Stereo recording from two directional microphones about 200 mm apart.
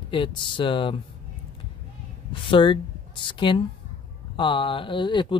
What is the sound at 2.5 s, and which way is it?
A man's voice, 25° left (ahead or behind).